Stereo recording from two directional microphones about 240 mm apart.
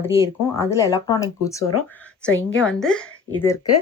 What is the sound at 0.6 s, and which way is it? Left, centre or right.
Speech, centre.